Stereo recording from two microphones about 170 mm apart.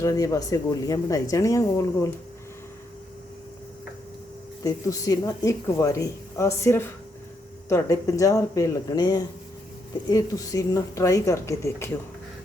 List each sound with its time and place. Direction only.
0.0 s a woman's voice: 20° left (ahead or behind)
4.6 s a woman's voice: 20° left (ahead or behind)